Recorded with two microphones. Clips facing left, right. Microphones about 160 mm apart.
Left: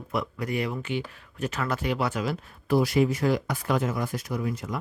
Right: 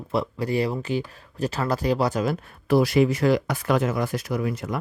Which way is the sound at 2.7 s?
75° right (ahead or behind).